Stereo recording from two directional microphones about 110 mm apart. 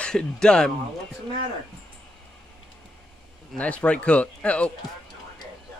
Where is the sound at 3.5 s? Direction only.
10° left (ahead or behind).